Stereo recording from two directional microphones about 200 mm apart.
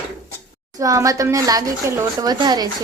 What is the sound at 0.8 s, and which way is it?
Speech, 15° right (ahead or behind).